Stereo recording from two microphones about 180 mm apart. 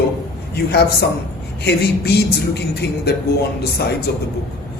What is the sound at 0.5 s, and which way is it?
A man's voice, 60° left (ahead or behind).